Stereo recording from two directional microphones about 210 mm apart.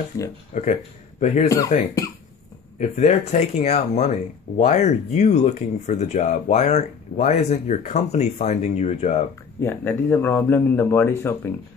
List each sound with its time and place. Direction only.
0.5 s speech: 35° left (ahead or behind)
9.6 s a man's voice: 10° left (ahead or behind)